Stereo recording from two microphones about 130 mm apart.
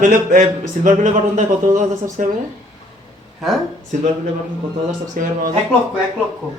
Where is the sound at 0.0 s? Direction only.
90° right.